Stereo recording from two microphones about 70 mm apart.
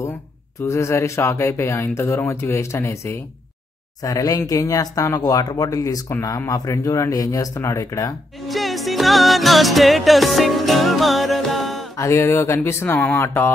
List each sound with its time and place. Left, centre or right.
0.6 s speech: left
4.0 s speech: left
8.5 s music: centre
12.0 s speech: left
12.6 s speech: left